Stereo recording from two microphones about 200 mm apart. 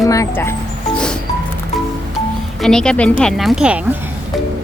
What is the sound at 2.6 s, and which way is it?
A woman's voice, 5° left (ahead or behind).